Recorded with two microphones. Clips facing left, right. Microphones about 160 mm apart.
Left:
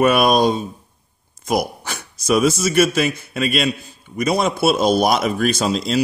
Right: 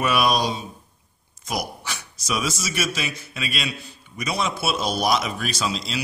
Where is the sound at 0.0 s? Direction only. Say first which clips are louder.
Left 7 dB; 50° left (ahead or behind).